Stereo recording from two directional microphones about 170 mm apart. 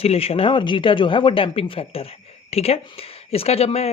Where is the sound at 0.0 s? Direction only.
35° left (ahead or behind).